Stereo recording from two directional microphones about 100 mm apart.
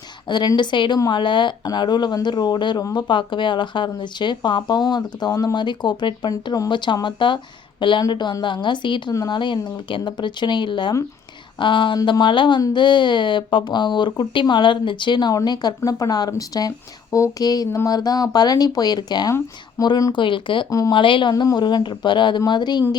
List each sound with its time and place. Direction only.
0.3 s speech: 50° left (ahead or behind)
20.1 s speech: 55° left (ahead or behind)
20.7 s speech: 35° left (ahead or behind)
20.9 s speech: 55° left (ahead or behind)
21.3 s speech: 40° left (ahead or behind)